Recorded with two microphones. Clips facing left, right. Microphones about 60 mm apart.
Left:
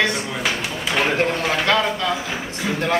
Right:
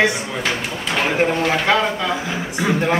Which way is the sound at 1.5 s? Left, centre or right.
Centre.